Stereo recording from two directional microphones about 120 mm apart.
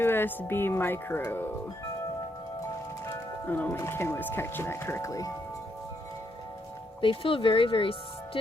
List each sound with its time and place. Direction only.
0.0 s speech: 20° left (ahead or behind)
3.4 s speech: 15° left (ahead or behind)
7.0 s speech: 45° left (ahead or behind)